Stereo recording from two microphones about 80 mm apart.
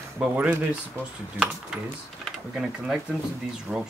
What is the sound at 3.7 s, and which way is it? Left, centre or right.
Speech, centre.